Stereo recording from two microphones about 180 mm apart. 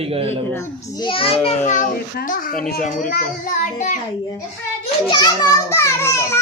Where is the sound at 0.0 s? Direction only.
30° right (ahead or behind).